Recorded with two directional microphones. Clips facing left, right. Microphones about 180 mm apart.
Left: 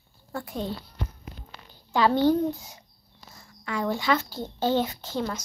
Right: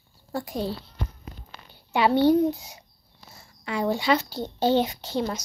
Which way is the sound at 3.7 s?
15° right (ahead or behind).